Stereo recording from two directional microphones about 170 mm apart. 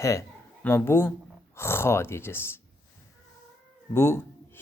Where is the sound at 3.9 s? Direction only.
15° left (ahead or behind).